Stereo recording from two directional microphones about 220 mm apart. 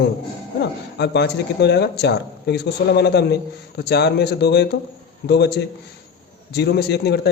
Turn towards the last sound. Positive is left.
turn(degrees=50)  # may be behind; listen again after turning